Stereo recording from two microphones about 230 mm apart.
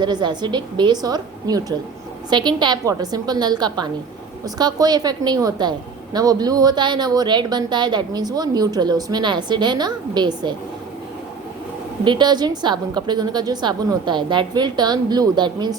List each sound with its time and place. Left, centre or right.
0.0 s a woman's voice: centre
12.0 s a woman's voice: centre